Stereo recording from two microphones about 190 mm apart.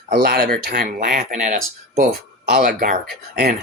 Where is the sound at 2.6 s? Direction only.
45° right (ahead or behind).